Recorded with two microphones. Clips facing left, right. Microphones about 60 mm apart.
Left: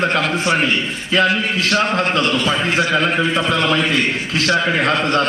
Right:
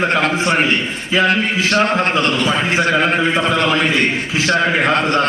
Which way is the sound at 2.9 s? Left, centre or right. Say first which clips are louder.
Right 2 dB; right.